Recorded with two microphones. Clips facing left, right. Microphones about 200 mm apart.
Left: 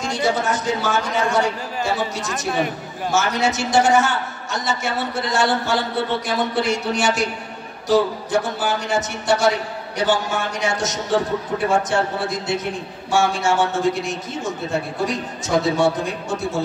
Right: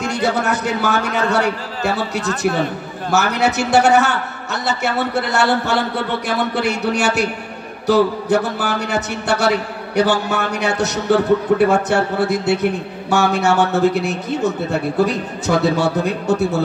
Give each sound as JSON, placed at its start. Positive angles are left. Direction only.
{"t": 0.0, "sound": "a man's voice", "side_deg": -65}